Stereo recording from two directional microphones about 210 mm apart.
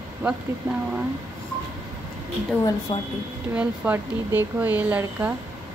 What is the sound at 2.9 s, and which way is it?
Speech, 20° left (ahead or behind).